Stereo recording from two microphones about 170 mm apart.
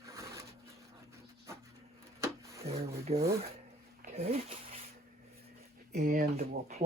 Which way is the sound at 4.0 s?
45° right (ahead or behind).